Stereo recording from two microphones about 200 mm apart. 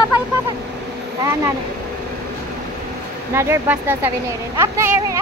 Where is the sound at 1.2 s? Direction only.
15° right (ahead or behind).